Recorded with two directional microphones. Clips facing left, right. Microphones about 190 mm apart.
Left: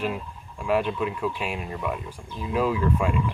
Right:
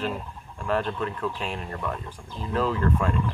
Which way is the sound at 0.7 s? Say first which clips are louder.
Left 3 dB; 10° left (ahead or behind).